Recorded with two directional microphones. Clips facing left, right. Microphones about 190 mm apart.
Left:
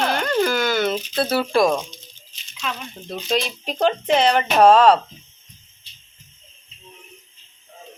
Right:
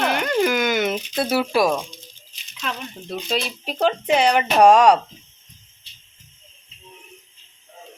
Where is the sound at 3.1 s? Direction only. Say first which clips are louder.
Left 2 dB; 5° right (ahead or behind).